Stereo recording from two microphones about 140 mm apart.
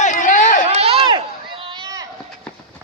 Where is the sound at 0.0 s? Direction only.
65° left (ahead or behind).